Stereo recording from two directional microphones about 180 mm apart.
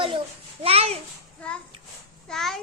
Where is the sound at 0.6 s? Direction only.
35° right (ahead or behind).